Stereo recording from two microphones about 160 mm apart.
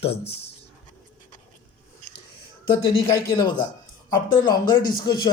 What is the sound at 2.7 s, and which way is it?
Speech, 30° left (ahead or behind).